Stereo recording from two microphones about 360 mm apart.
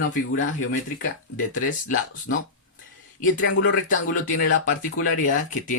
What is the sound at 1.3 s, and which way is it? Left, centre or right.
Speech, left.